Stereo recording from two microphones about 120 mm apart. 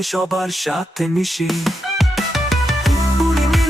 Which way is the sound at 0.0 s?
Centre (ahead or behind).